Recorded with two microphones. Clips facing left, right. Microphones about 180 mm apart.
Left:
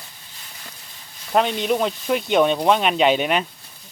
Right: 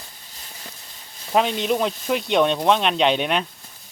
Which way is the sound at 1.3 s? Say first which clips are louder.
Left 1 dB; centre (ahead or behind).